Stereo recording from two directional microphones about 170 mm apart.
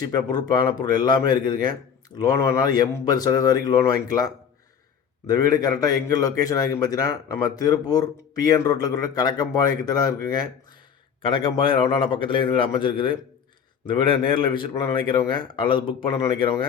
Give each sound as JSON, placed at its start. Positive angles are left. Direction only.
{"t": 0.1, "sound": "a man's voice", "side_deg": 25}
{"t": 11.2, "sound": "a man's voice", "side_deg": 30}